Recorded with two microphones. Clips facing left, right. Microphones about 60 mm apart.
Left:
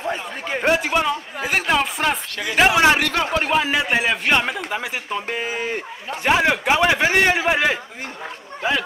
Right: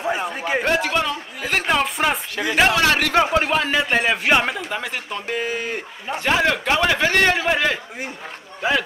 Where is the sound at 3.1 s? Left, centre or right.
Centre.